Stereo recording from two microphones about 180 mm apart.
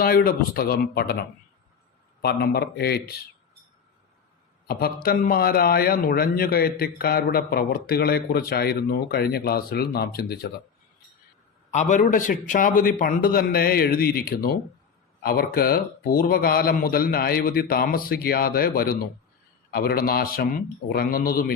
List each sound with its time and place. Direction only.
0.0 s a man's voice: 55° left (ahead or behind)
2.2 s a man's voice: 60° left (ahead or behind)
5.0 s a man's voice: 55° left (ahead or behind)
11.7 s a man's voice: 40° left (ahead or behind)